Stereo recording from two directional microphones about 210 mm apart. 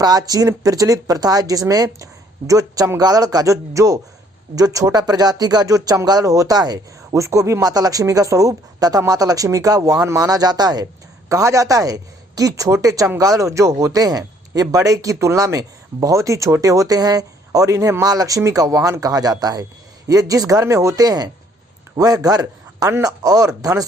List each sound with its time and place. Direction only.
0.0 s speech: 20° right (ahead or behind)